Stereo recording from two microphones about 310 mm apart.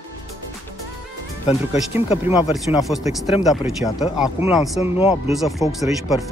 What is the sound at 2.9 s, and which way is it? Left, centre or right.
Speech, centre.